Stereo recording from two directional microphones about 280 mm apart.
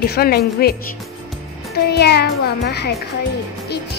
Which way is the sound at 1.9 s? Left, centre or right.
Left.